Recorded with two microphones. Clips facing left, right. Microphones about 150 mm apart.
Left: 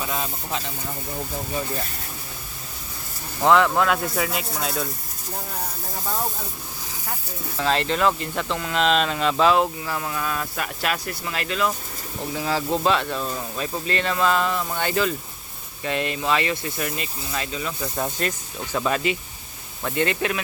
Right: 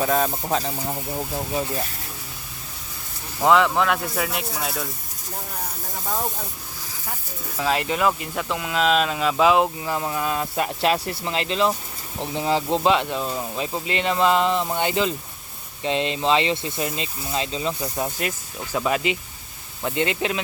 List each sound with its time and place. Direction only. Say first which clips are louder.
0.0 s speech: right 7 dB; 45° right (ahead or behind)
3.4 s speech: even; centre (ahead or behind)
7.5 s speech: even; 10° right (ahead or behind)
17.9 s speech: even; 10° right (ahead or behind)